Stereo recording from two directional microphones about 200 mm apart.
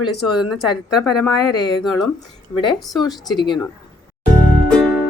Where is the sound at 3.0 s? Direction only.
20° left (ahead or behind).